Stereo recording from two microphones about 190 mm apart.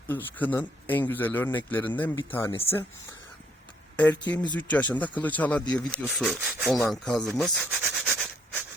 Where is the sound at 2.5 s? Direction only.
30° left (ahead or behind).